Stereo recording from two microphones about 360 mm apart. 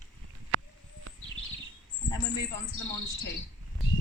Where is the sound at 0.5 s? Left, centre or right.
Right.